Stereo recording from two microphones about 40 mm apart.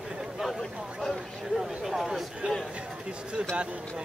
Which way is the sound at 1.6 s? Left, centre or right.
Centre.